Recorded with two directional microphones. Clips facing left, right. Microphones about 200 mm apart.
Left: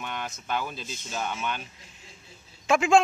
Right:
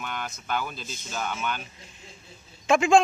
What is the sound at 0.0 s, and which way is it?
Speech, 25° left (ahead or behind).